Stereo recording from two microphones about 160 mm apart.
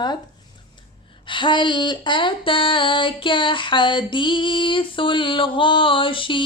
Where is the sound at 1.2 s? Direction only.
30° left (ahead or behind).